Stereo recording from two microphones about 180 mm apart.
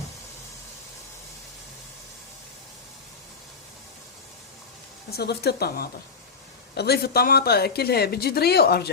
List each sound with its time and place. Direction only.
5.1 s speech: 60° left (ahead or behind)